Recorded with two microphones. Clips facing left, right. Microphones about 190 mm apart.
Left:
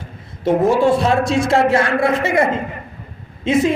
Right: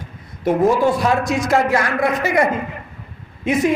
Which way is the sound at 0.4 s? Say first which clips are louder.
Left 1 dB; 25° left (ahead or behind).